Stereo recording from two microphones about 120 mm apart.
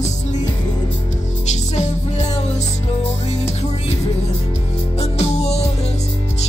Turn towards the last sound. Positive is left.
turn(degrees=65)  # may be behind; listen again after turning